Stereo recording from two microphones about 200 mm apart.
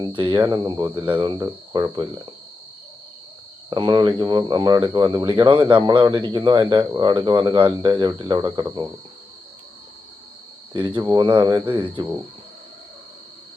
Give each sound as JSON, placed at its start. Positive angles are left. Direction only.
{"t": 0.0, "sound": "speech", "side_deg": -25}
{"t": 3.7, "sound": "speech", "side_deg": -20}
{"t": 10.8, "sound": "speech", "side_deg": -25}